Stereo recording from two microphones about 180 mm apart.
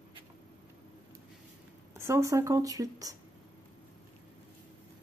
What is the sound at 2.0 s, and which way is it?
Speech, 15° right (ahead or behind).